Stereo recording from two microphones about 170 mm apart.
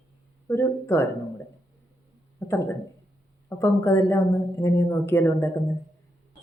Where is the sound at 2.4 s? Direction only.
20° left (ahead or behind).